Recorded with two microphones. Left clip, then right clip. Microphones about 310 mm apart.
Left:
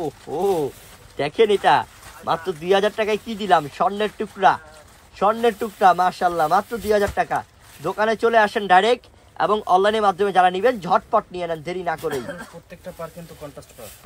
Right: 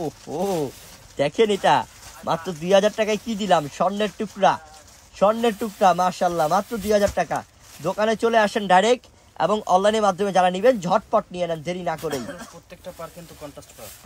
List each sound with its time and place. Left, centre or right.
0.3 s speech: right
12.1 s speech: centre